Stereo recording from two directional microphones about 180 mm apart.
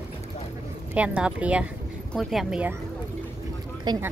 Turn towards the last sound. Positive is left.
turn(degrees=-20)  # may be behind; listen again after turning